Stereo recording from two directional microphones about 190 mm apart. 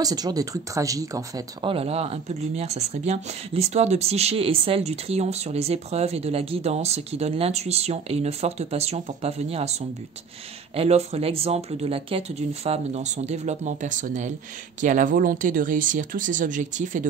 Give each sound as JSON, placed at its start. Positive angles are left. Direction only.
{"t": 0.0, "sound": "speech", "side_deg": -20}